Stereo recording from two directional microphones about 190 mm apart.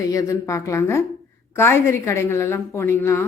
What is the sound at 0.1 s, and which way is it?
A woman's voice, 15° left (ahead or behind).